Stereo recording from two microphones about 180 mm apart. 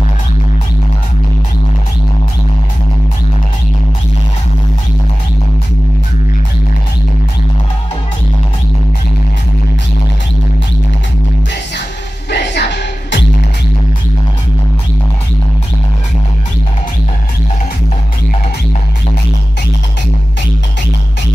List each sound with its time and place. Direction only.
12.3 s music: 75° left (ahead or behind)